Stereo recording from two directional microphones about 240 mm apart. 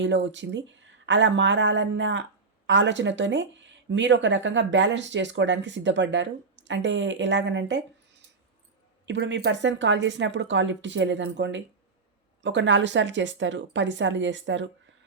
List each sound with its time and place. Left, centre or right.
0.0 s speech: right
9.0 s speech: right